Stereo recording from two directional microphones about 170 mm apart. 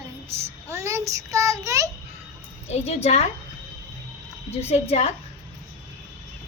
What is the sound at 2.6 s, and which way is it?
Speech, 40° left (ahead or behind).